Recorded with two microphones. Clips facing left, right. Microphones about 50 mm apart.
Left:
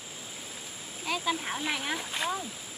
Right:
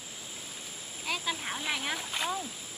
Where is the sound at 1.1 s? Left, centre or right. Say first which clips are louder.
Left 3 dB; centre.